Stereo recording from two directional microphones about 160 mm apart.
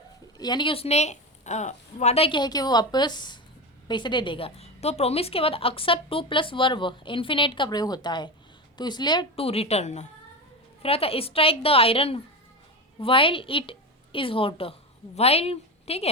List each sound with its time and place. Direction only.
0.3 s a woman's voice: 25° left (ahead or behind)